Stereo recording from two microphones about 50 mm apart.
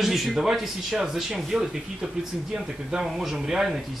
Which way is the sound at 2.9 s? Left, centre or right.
Centre.